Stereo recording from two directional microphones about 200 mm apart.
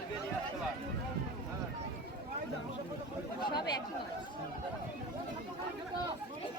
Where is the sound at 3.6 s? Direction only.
20° left (ahead or behind).